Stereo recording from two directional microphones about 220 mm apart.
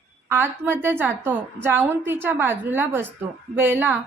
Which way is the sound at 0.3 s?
10° right (ahead or behind).